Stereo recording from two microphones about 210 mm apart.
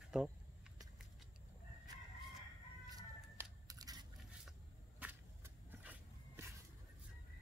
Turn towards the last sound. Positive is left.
turn(degrees=-10)  # may be behind; listen again after turning